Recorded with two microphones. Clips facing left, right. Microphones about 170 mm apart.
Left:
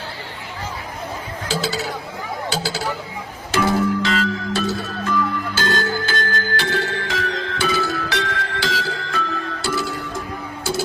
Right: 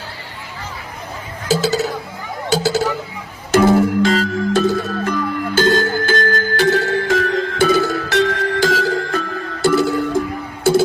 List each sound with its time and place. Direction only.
1.5 s speech: 45° right (ahead or behind)
3.5 s music: 50° right (ahead or behind)